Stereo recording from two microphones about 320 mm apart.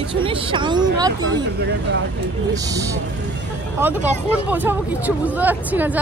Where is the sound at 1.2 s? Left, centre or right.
Right.